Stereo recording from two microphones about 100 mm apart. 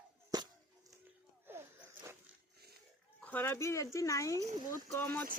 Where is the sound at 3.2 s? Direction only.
20° left (ahead or behind).